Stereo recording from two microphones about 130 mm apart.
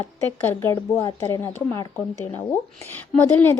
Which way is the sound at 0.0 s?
20° left (ahead or behind).